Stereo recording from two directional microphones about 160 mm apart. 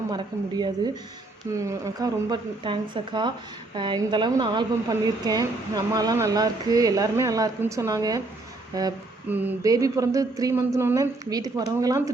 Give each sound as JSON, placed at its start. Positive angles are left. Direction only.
{"t": 0.1, "sound": "speech", "side_deg": -25}
{"t": 9.3, "sound": "speech", "side_deg": -10}